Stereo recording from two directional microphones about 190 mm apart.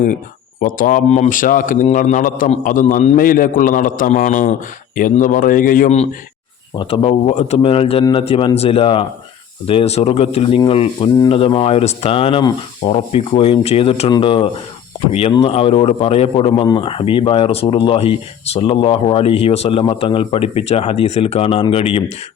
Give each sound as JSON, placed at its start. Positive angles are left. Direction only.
{"t": 0.6, "sound": "a man's voice", "side_deg": 45}
{"t": 6.7, "sound": "a man's voice", "side_deg": 30}